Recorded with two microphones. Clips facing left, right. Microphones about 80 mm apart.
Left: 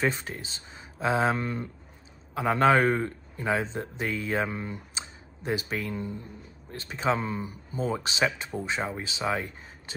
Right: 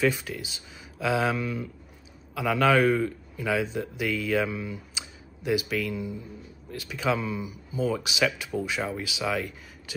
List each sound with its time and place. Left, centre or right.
0.0 s a man's voice: left